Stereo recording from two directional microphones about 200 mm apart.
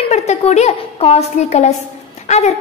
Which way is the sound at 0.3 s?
35° left (ahead or behind).